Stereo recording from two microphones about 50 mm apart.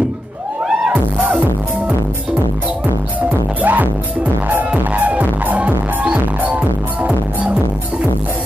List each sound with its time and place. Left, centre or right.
1.1 s music: right
3.6 s music: right